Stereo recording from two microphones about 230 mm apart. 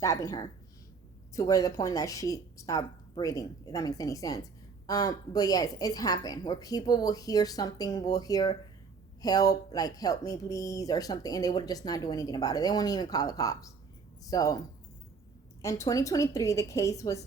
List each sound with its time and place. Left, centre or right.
0.0 s speech: centre
15.6 s speech: centre